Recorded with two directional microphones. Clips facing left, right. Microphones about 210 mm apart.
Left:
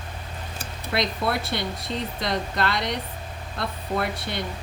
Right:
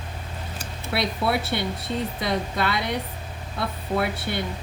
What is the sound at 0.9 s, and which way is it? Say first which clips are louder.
Speech: right 1 dB; 5° right (ahead or behind).